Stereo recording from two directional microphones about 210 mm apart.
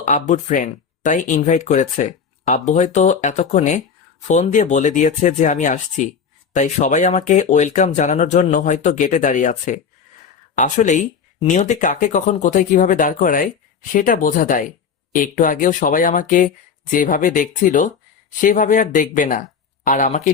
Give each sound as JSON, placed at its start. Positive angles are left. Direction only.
{"t": 0.0, "sound": "speech", "side_deg": 35}